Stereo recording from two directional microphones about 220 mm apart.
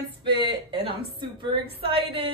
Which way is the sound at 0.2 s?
20° right (ahead or behind).